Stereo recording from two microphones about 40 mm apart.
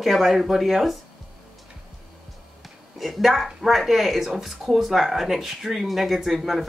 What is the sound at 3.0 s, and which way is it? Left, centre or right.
Speech, centre.